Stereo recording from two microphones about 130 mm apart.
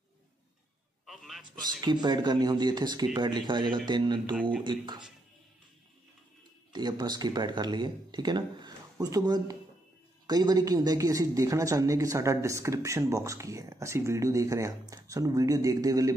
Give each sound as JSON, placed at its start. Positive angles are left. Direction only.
{"t": 1.0, "sound": "a sound", "side_deg": 0}
{"t": 1.8, "sound": "speech", "side_deg": -35}
{"t": 4.4, "sound": "speech", "side_deg": -10}
{"t": 4.6, "sound": "speech", "side_deg": -35}
{"t": 6.7, "sound": "a man's voice", "side_deg": -35}